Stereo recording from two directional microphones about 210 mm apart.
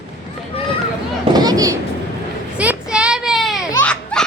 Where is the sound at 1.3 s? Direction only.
20° right (ahead or behind).